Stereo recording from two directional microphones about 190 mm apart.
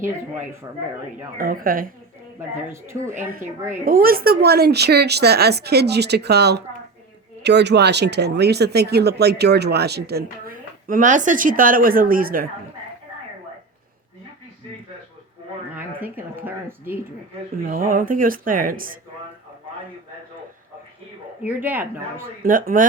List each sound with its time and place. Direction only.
1.4 s speech: 50° right (ahead or behind)
2.6 s speech: 15° right (ahead or behind)
3.8 s speech: 50° right (ahead or behind)
16.0 s speech: 10° right (ahead or behind)
17.5 s speech: 50° right (ahead or behind)
21.4 s speech: 10° right (ahead or behind)
22.4 s speech: 45° right (ahead or behind)